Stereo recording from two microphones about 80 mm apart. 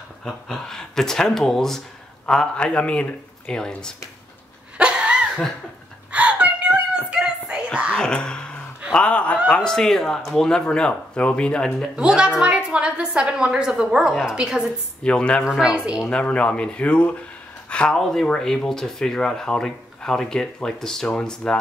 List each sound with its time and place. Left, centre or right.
0.2 s speech: centre
4.7 s a sound: centre
7.9 s wail: centre
8.9 s speech: centre
12.0 s a woman's voice: centre
15.0 s speech: centre
15.4 s a woman's voice: centre
16.1 s speech: centre
17.6 s a sound: centre
17.9 s speech: centre